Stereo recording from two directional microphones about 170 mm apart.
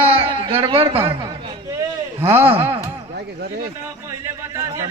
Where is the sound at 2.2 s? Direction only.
15° right (ahead or behind).